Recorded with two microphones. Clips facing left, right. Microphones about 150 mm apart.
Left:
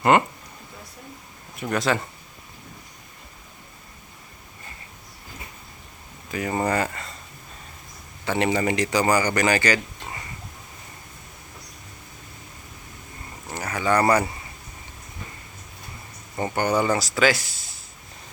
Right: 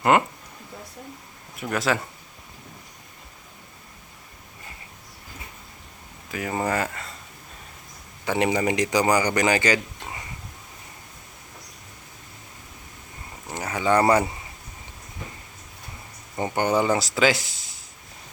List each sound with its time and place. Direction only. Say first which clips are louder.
0.1 s a sound: left 1 dB; 5° right (ahead or behind)
1.5 s speech: left 1 dB; 5° right (ahead or behind)
6.3 s speech: left 2 dB; 5° right (ahead or behind)
8.2 s a man's voice: even; 15° right (ahead or behind)
13.5 s a sound: right 1 dB; 20° right (ahead or behind)
16.3 s speech: even; 15° right (ahead or behind)